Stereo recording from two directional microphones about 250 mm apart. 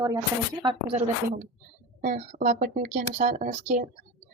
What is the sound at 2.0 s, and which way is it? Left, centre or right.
A woman's voice, right.